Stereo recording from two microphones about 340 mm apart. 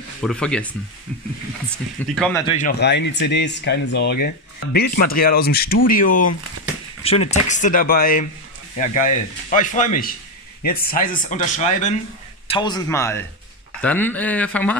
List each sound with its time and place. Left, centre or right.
0.2 s speech: centre
1.7 s speech: centre
2.4 s a man's voice: left; by 14.8 s centre